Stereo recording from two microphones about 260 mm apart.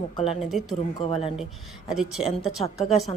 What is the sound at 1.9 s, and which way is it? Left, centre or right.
Speech, centre.